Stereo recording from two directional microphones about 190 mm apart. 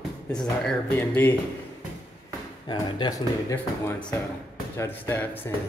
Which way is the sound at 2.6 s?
20° left (ahead or behind).